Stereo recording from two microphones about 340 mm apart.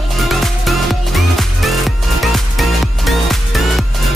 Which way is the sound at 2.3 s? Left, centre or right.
Centre.